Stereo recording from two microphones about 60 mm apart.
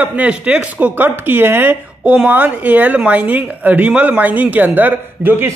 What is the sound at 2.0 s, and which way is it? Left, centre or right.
A woman's voice, right.